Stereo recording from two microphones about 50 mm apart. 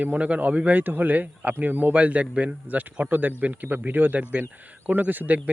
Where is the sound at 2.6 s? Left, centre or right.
Right.